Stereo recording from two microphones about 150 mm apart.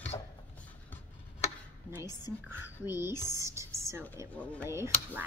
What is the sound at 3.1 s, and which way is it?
Speech, 25° left (ahead or behind).